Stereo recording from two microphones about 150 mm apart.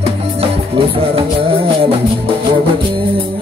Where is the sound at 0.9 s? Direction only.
40° right (ahead or behind).